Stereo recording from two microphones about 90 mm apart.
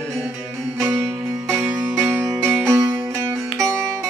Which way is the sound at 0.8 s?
30° right (ahead or behind).